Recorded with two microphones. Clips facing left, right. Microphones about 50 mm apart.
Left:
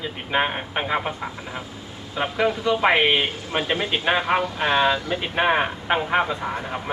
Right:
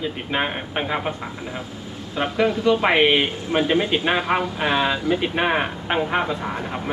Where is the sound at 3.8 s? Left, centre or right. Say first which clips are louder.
Right 1 dB; centre.